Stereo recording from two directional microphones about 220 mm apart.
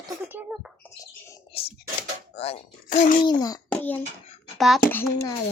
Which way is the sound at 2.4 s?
30° left (ahead or behind).